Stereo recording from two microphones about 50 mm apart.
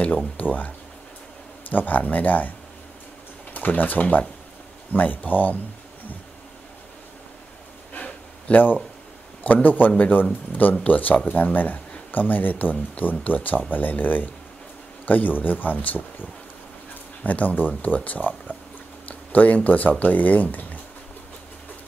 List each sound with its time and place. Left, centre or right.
0.4 s speech: left
1.7 s speech: left
3.5 s speech: left
7.9 s a sound: left
9.4 s speech: left